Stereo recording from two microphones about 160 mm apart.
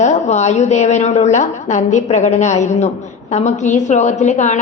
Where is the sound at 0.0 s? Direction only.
45° left (ahead or behind).